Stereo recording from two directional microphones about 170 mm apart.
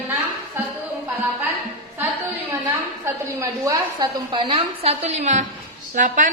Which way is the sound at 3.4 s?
20° right (ahead or behind).